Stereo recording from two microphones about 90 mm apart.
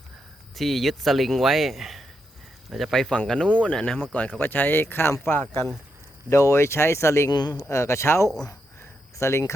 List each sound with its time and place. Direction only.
0.5 s speech: centre (ahead or behind); by 7.3 s 30° left (ahead or behind)
7.3 s speech: 50° left (ahead or behind)
7.7 s speech: 30° left (ahead or behind)
8.8 s a sound: 35° left (ahead or behind)